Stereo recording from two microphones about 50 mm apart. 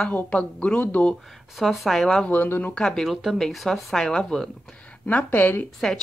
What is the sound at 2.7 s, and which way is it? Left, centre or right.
Speech, centre.